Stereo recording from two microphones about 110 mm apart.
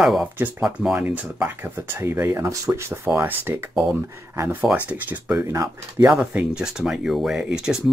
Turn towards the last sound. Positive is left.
turn(degrees=-5)  # may be behind; listen again after turning